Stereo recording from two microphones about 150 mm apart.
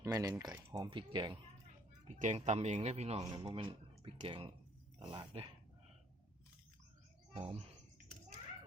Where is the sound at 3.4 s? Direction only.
40° right (ahead or behind).